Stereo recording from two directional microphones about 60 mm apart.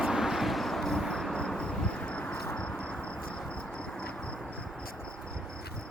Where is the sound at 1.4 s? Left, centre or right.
Centre.